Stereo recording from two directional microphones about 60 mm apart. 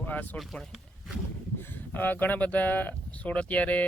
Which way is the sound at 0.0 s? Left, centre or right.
Left.